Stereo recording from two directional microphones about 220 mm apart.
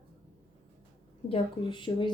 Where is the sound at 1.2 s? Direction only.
25° left (ahead or behind).